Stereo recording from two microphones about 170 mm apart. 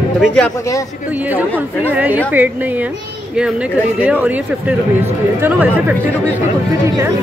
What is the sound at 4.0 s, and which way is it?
Speech, 10° right (ahead or behind).